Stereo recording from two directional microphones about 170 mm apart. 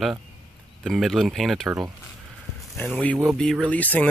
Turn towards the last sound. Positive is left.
turn(degrees=10)  # may be behind; listen again after turning